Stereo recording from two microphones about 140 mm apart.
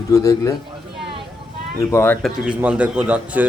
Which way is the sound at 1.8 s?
20° left (ahead or behind).